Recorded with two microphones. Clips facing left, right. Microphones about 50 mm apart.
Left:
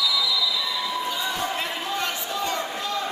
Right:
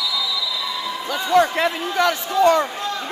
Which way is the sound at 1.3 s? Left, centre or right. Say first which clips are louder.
Right 11 dB; right.